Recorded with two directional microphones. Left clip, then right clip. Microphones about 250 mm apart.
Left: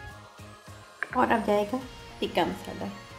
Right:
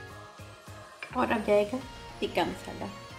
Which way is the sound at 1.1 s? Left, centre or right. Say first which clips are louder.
Left 1 dB; centre.